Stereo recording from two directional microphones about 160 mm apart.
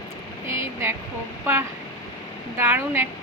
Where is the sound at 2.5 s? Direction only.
10° right (ahead or behind).